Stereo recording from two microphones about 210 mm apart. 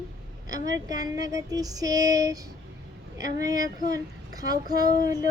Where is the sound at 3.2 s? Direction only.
15° right (ahead or behind).